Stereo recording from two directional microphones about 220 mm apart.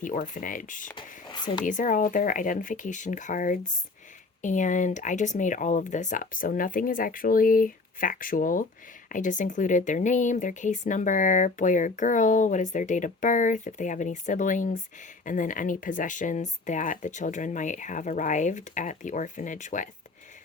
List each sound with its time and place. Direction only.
0.0 s speech: 35° left (ahead or behind)
0.9 s a sound: 20° left (ahead or behind)
1.6 s speech: 35° left (ahead or behind)